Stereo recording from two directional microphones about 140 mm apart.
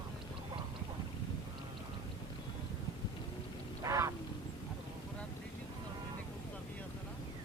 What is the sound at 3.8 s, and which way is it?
Duck, 20° right (ahead or behind).